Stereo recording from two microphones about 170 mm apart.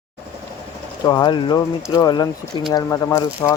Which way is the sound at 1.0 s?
25° left (ahead or behind).